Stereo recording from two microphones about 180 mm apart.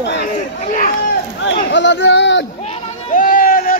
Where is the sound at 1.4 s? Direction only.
90° left.